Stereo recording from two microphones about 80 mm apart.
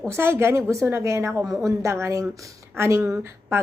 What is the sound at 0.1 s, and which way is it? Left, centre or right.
Speech, right.